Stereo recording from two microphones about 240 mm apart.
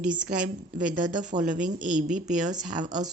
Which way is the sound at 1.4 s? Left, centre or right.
Right.